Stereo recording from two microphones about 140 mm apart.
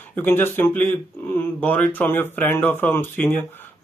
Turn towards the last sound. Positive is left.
turn(degrees=15)  # may be behind; listen again after turning